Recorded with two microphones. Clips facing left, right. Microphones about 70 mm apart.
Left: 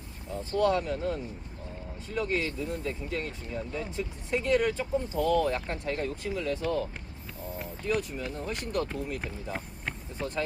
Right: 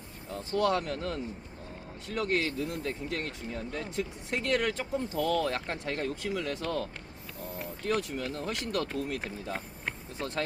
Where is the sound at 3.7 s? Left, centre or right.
Right.